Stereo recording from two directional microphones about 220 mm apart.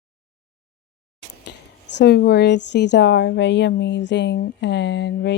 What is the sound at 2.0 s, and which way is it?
Speech, 45° left (ahead or behind).